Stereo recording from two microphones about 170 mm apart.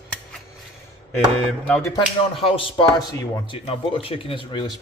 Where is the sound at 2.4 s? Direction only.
35° left (ahead or behind).